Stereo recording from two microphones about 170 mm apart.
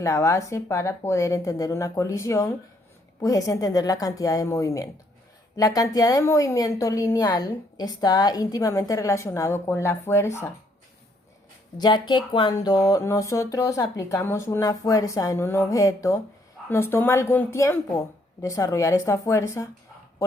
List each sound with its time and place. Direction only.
0.0 s a woman's voice: 15° left (ahead or behind)
11.8 s a woman's voice: 25° left (ahead or behind)